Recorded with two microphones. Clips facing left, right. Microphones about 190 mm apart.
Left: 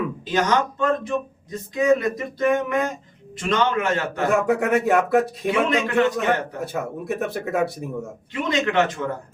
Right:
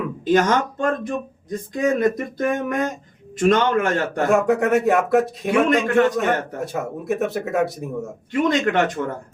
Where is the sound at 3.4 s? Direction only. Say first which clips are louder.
Right 4 dB; 50° right (ahead or behind).